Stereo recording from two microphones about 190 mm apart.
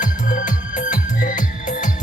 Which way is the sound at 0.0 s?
40° left (ahead or behind).